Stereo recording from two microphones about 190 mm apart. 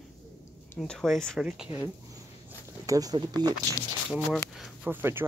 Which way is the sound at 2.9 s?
20° right (ahead or behind).